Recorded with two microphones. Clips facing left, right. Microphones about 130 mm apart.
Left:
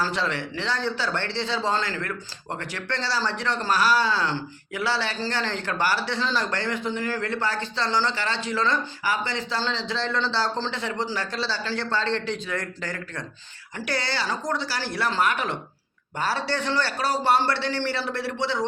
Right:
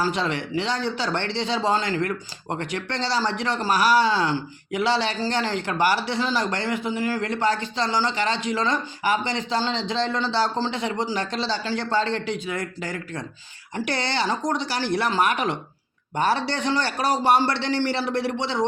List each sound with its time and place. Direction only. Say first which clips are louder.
0.0 s speech: right 2 dB; 15° right (ahead or behind)